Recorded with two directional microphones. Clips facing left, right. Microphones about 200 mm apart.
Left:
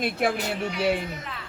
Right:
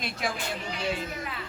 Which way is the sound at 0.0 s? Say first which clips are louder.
Left 8 dB; 60° left (ahead or behind).